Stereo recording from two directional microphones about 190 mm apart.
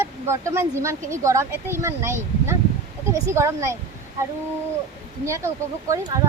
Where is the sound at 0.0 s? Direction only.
15° right (ahead or behind).